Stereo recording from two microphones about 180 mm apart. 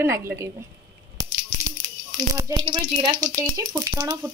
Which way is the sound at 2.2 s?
20° right (ahead or behind).